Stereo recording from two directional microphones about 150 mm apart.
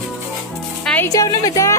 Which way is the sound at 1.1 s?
25° left (ahead or behind).